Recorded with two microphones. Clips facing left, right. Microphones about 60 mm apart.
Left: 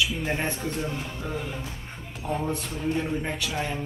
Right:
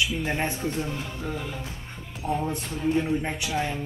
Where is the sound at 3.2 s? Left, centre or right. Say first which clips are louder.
Right 2 dB; centre.